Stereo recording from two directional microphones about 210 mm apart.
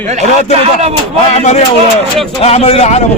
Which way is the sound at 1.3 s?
35° left (ahead or behind).